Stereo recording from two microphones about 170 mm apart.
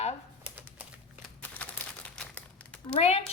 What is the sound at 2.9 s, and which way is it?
Speech, 40° left (ahead or behind).